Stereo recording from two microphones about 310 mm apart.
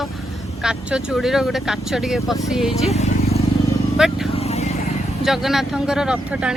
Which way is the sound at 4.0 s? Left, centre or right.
Centre.